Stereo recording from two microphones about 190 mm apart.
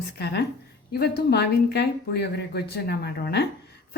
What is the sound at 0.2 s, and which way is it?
A woman's voice, 60° left (ahead or behind).